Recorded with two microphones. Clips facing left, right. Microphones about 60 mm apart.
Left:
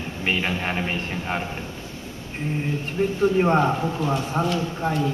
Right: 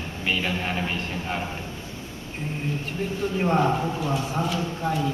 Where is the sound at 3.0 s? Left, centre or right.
Left.